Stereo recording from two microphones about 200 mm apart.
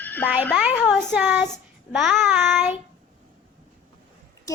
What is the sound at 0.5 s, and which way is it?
A woman's voice, 5° right (ahead or behind).